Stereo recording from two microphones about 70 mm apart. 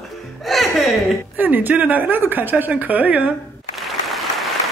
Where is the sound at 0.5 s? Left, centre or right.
Centre.